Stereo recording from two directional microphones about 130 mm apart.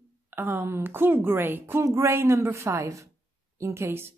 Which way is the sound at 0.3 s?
15° right (ahead or behind).